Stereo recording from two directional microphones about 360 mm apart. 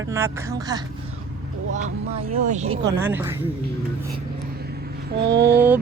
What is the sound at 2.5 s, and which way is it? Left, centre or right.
Speech, centre.